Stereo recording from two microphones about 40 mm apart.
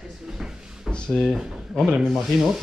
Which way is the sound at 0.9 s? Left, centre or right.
Left.